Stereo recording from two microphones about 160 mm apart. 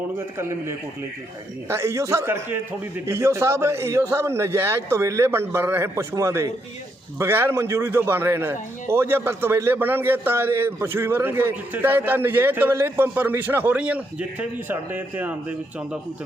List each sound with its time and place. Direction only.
0.3 s speech: 15° right (ahead or behind)